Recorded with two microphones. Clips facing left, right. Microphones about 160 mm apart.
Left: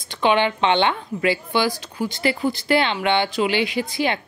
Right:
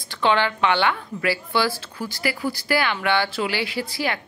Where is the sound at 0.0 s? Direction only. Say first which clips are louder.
Left 2 dB; 20° left (ahead or behind).